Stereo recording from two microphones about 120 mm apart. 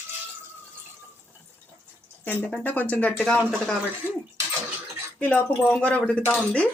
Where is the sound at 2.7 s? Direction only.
15° left (ahead or behind).